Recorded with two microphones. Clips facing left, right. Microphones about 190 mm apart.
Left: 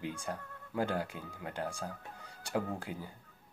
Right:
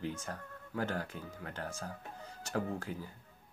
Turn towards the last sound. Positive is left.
turn(degrees=15)  # may be behind; listen again after turning